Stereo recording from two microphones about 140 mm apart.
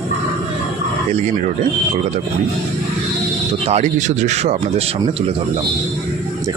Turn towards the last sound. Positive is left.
turn(degrees=-50)  # may be behind; listen again after turning